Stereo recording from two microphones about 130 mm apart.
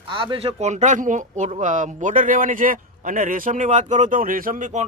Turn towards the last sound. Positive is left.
turn(degrees=-80)